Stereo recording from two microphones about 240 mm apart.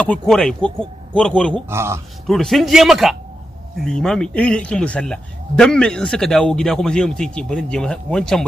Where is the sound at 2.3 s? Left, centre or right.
Centre.